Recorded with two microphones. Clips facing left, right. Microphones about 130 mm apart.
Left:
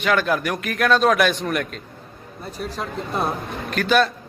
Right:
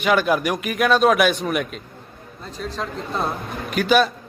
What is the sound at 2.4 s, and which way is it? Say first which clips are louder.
Speech: even; 10° left (ahead or behind).